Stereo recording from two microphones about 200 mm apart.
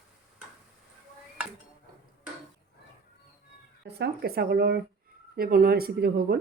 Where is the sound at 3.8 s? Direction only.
55° right (ahead or behind).